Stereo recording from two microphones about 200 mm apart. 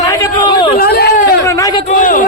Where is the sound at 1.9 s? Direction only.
40° left (ahead or behind).